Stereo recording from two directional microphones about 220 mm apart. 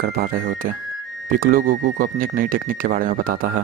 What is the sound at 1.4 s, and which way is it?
Speech, 40° right (ahead or behind).